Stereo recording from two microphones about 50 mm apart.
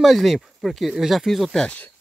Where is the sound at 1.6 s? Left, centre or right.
Left.